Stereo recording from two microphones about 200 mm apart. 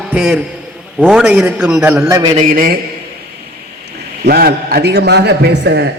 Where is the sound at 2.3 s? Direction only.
45° right (ahead or behind).